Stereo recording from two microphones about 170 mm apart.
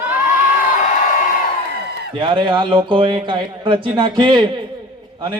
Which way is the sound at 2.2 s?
30° right (ahead or behind).